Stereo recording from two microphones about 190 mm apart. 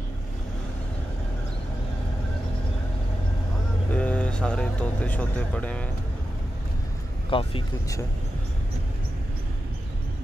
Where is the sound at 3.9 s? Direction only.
5° left (ahead or behind).